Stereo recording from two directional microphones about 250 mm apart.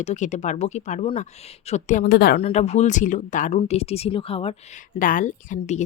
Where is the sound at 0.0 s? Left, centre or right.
Left.